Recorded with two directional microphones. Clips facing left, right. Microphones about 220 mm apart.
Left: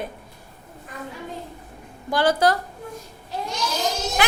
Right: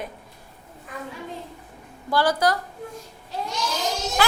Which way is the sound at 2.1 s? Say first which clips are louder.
Left 2 dB; 20° left (ahead or behind).